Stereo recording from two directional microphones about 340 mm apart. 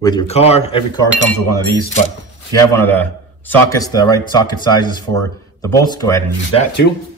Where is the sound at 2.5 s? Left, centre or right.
Centre.